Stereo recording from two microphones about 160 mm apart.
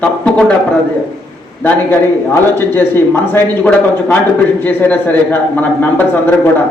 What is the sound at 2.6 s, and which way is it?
Speech, 15° left (ahead or behind).